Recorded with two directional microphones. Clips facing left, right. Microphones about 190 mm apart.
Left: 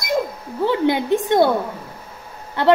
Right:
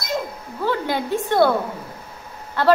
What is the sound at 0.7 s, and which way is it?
Speech, 20° left (ahead or behind).